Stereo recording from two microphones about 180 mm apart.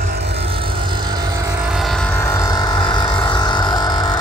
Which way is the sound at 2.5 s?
25° left (ahead or behind).